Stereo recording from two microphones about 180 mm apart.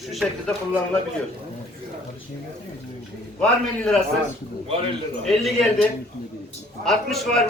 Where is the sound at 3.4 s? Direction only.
5° left (ahead or behind).